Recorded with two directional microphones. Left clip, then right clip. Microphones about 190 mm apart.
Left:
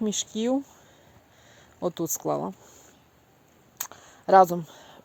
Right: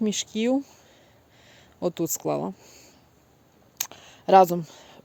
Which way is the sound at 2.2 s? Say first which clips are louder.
Right 1 dB; 5° right (ahead or behind).